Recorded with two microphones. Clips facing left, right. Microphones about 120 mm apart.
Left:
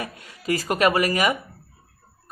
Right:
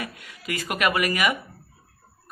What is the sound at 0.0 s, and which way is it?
A man's voice, 35° left (ahead or behind).